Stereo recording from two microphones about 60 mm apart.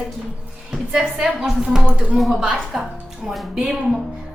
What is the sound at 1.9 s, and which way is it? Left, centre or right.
Speech, right.